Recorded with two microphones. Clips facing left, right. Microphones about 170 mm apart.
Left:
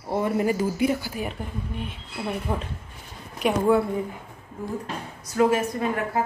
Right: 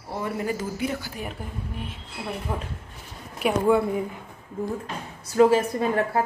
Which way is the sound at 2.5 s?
Centre (ahead or behind).